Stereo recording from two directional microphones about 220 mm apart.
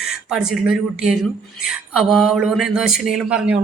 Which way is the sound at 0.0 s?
Centre (ahead or behind).